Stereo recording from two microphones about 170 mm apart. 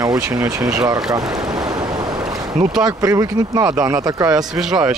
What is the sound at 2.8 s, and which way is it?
Speech, 20° right (ahead or behind).